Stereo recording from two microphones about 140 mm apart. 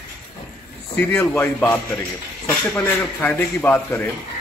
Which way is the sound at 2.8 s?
15° left (ahead or behind).